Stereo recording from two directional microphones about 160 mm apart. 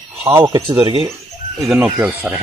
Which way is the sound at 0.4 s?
25° right (ahead or behind).